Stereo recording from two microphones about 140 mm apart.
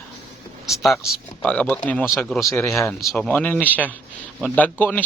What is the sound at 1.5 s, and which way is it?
Speech, 10° left (ahead or behind).